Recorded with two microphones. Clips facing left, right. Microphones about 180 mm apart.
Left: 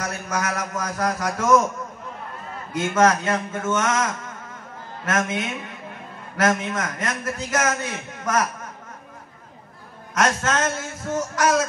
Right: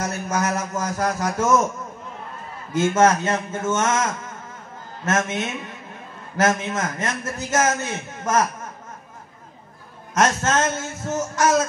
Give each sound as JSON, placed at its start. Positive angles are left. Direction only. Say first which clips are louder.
{"t": 0.0, "sound": "a man's voice", "louder": "right 3 dB", "side_deg": -25}
{"t": 2.7, "sound": "a man's voice", "louder": "right 2 dB", "side_deg": -25}
{"t": 10.1, "sound": "a man's voice", "louder": "right 2 dB", "side_deg": -25}